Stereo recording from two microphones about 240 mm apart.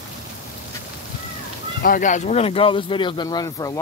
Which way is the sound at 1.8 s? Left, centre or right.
Left.